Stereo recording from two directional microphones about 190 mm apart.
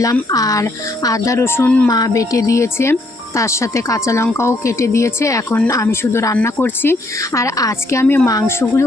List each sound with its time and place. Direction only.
0.0 s speech: 20° left (ahead or behind)
1.9 s speech: 20° left (ahead or behind)